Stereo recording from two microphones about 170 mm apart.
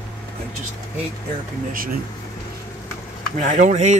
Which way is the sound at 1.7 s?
55° right (ahead or behind).